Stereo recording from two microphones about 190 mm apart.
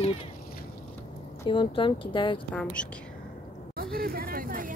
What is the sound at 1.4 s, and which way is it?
Speech, 25° left (ahead or behind).